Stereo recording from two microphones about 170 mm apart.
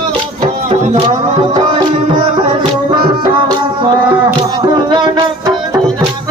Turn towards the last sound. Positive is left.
turn(degrees=-25)  # may be behind; listen again after turning